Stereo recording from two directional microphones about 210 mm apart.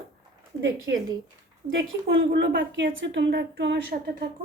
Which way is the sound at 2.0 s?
50° right (ahead or behind).